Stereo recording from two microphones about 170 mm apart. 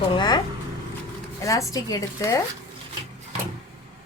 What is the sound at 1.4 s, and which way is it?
Speech, 20° left (ahead or behind).